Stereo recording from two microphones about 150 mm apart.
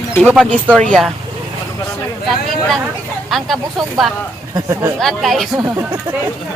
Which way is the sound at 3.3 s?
Centre (ahead or behind).